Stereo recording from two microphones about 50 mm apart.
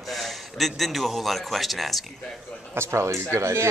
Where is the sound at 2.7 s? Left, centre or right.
Right.